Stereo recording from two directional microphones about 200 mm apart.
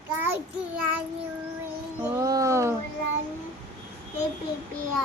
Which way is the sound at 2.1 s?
15° right (ahead or behind).